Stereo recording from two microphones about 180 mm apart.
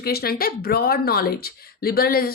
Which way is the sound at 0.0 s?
60° left (ahead or behind).